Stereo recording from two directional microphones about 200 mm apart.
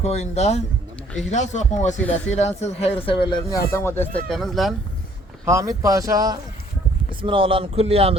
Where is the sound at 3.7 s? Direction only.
10° left (ahead or behind).